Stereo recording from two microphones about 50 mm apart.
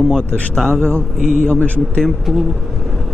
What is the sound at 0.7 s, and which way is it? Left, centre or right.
Speech, right.